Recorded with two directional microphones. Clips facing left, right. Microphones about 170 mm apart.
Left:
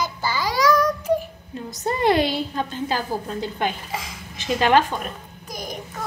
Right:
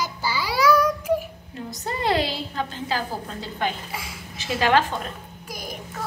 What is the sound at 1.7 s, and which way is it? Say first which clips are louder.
A woman's voice: left 4 dB; 20° left (ahead or behind).